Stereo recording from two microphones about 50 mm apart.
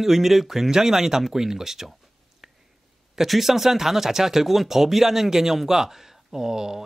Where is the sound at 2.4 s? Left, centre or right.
Centre.